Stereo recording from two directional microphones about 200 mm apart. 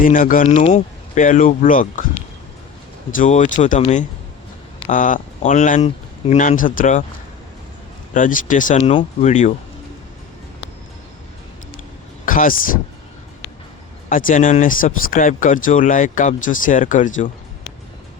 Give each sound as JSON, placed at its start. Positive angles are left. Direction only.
{"t": 0.0, "sound": "speech", "side_deg": 45}
{"t": 3.1, "sound": "speech", "side_deg": 40}
{"t": 8.1, "sound": "speech", "side_deg": 40}
{"t": 8.8, "sound": "speech", "side_deg": 30}
{"t": 12.2, "sound": "speech", "side_deg": 45}
{"t": 14.1, "sound": "speech", "side_deg": 40}